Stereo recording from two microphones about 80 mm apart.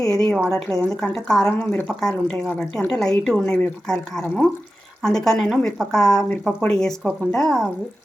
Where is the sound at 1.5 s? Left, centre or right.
Left.